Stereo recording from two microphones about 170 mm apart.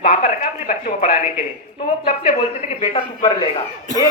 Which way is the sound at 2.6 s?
35° left (ahead or behind).